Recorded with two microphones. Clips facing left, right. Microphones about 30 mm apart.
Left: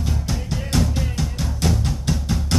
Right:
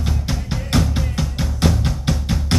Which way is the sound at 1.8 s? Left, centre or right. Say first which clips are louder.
Right 2 dB; right.